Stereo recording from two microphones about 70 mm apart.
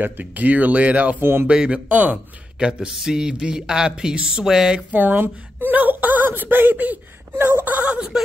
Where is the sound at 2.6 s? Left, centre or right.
Centre.